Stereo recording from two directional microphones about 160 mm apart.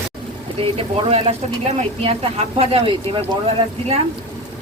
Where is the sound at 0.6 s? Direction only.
35° right (ahead or behind).